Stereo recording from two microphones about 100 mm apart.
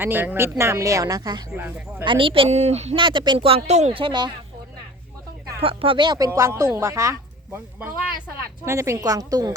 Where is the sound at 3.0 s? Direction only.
50° right (ahead or behind).